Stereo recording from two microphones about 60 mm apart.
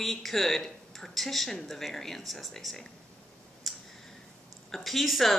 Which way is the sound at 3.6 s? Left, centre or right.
Centre.